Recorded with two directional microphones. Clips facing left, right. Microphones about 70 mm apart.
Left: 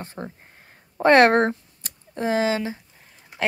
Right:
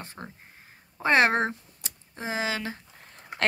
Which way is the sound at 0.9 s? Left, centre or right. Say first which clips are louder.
Left 7 dB; left.